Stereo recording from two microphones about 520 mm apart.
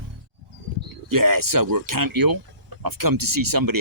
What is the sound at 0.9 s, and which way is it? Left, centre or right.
Speech, right.